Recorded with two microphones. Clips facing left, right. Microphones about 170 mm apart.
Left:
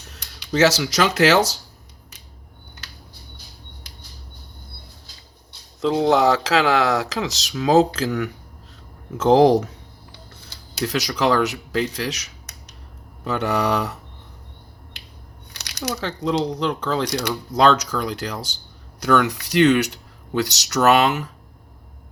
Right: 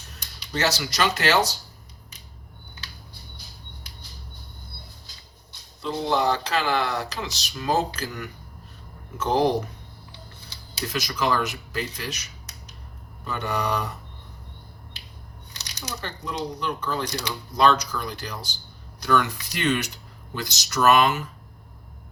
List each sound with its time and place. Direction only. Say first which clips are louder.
0.5 s speech: left 8 dB; 90° left
5.8 s speech: left 7 dB; 90° left
10.8 s speech: left 5 dB; 80° left
15.5 s speech: left 9 dB; 70° left (ahead or behind); by 18.5 s 90° left
19.0 s speech: left 5 dB; 70° left (ahead or behind)